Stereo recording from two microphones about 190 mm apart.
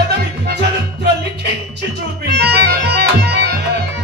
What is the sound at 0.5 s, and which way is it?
Music, 60° right (ahead or behind).